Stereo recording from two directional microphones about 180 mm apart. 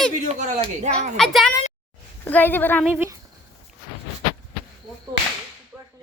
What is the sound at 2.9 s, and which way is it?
Speech, 10° right (ahead or behind).